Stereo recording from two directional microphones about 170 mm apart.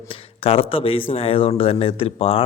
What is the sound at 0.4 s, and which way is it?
Speech, 35° left (ahead or behind).